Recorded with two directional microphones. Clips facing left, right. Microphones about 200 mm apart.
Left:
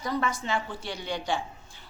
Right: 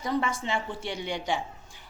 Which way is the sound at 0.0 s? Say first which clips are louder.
Right 1 dB; 25° right (ahead or behind).